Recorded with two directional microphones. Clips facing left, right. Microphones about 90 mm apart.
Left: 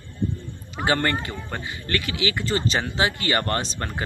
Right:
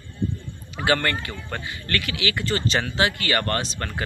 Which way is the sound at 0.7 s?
25° left (ahead or behind).